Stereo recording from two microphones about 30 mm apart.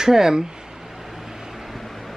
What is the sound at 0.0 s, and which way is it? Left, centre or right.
Speech, centre.